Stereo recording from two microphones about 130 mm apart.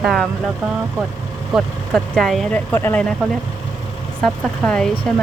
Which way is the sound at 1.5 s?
Centre (ahead or behind).